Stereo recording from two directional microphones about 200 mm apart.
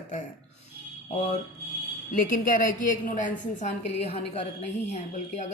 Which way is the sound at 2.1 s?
40° left (ahead or behind).